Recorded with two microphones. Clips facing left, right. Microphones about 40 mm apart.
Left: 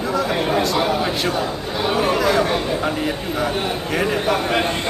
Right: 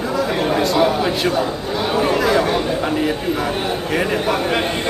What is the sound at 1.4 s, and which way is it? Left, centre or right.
Speech, right.